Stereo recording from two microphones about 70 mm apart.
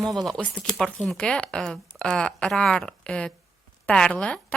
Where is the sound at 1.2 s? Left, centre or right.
Centre.